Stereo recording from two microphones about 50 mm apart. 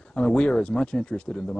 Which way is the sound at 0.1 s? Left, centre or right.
Centre.